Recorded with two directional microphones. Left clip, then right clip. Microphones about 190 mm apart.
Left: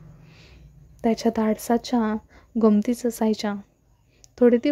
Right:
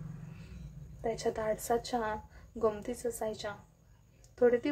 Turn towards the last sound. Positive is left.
turn(degrees=40)  # may be behind; listen again after turning